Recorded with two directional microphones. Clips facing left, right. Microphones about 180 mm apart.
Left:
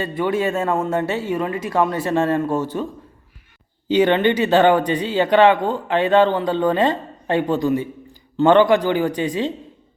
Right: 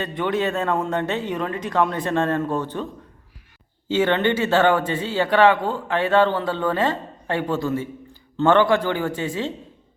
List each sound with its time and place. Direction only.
0.0 s speech: 5° left (ahead or behind)
3.8 s speech: 15° left (ahead or behind)